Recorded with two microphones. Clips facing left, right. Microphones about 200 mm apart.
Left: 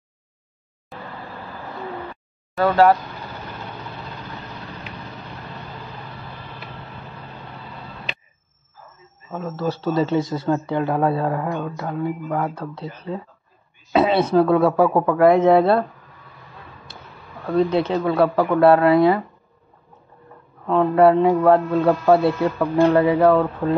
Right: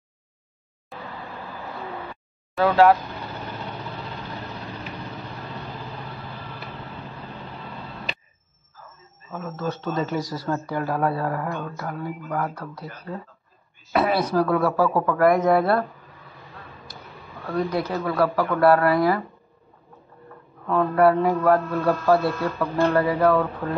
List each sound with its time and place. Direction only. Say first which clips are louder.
0.9 s vehicle: left 1 dB; centre (ahead or behind)
2.5 s speech: left 1 dB; centre (ahead or behind)
9.3 s speech: left 4 dB; 30° left (ahead or behind)
17.6 s speech: left 6 dB; 25° left (ahead or behind)
20.6 s speech: left 4 dB; 20° left (ahead or behind)